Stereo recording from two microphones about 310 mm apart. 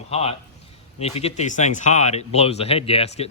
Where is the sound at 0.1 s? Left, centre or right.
Centre.